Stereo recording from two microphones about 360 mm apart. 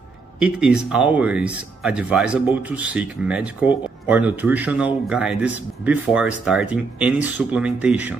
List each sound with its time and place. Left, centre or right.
0.4 s speech: centre